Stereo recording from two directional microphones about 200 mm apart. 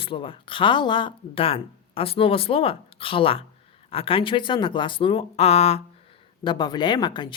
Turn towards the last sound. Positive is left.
turn(degrees=20)  # may be behind; listen again after turning